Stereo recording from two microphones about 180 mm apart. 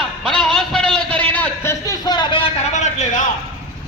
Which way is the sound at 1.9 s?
25° left (ahead or behind).